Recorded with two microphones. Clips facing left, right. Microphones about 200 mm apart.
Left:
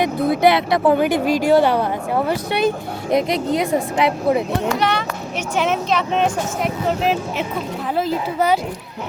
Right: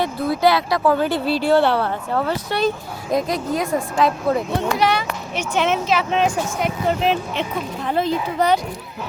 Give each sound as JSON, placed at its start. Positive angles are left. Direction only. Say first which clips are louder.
{"t": 0.0, "sound": "speech", "louder": "left 3 dB", "side_deg": 20}
{"t": 4.8, "sound": "a child's voice", "louder": "right 1 dB", "side_deg": -10}